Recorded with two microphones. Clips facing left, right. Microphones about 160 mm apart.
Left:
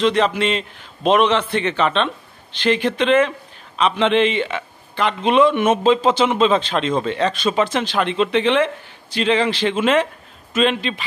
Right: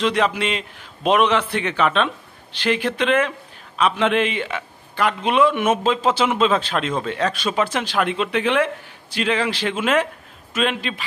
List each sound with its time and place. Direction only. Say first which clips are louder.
0.0 s speech: left 3 dB; 10° right (ahead or behind)